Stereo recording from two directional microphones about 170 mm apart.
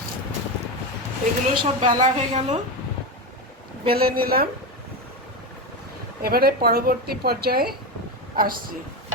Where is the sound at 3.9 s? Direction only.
65° right (ahead or behind).